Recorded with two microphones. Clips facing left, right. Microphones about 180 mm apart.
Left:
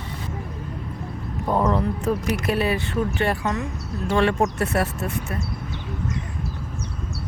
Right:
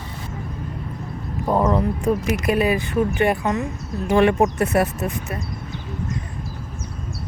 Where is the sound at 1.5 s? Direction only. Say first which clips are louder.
Right 2 dB; 10° right (ahead or behind).